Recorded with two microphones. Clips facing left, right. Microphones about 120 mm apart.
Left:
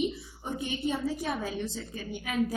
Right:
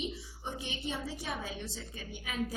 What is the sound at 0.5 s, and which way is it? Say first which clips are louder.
A woman's voice: left 9 dB; 50° left (ahead or behind).